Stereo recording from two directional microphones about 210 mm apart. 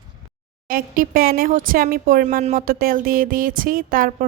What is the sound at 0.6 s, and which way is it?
Speech, 40° right (ahead or behind).